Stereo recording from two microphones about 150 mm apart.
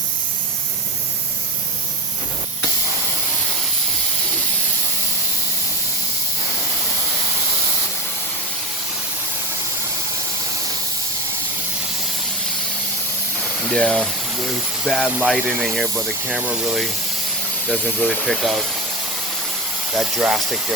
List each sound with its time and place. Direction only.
13.7 s speech: 5° left (ahead or behind)
20.0 s speech: centre (ahead or behind)